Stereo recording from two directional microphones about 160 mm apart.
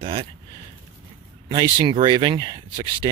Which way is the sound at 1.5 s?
25° right (ahead or behind).